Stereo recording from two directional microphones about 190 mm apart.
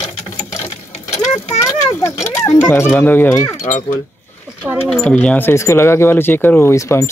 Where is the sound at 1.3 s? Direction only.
35° left (ahead or behind).